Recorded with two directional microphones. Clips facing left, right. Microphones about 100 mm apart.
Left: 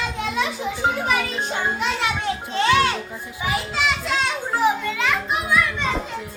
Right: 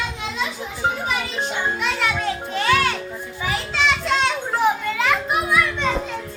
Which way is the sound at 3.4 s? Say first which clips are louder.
Left 1 dB; 15° left (ahead or behind).